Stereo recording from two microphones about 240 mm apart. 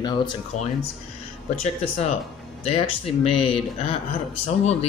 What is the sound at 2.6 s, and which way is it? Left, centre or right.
Speech, left.